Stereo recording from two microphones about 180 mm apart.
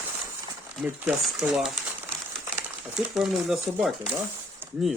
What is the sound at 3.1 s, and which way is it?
Speech, centre (ahead or behind).